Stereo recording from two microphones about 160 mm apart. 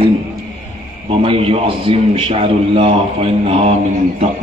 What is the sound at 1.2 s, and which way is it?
A man's voice, 35° right (ahead or behind).